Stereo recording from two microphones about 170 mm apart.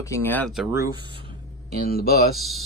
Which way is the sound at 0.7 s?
20° right (ahead or behind).